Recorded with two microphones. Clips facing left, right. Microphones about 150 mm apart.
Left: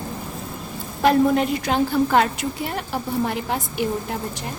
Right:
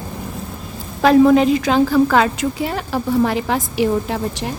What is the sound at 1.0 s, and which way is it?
A woman's voice, 90° right.